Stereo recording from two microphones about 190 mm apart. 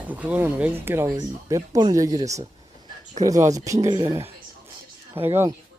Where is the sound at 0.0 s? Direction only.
10° right (ahead or behind).